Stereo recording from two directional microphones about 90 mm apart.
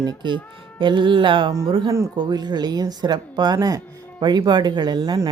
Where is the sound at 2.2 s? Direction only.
55° right (ahead or behind).